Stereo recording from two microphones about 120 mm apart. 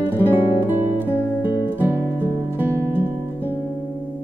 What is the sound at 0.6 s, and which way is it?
Music, 15° right (ahead or behind).